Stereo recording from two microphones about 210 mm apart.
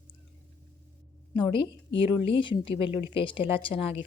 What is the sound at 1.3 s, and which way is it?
A woman's voice, 25° left (ahead or behind).